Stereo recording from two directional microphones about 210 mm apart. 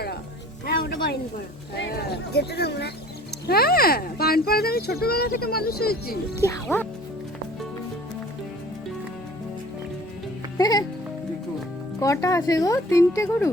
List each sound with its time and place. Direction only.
1.7 s speech: 50° left (ahead or behind)
6.4 s speech: 10° left (ahead or behind)
10.6 s speech: 20° left (ahead or behind)
11.9 s speech: 15° left (ahead or behind)